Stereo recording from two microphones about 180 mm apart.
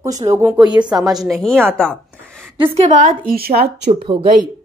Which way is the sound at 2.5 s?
30° right (ahead or behind).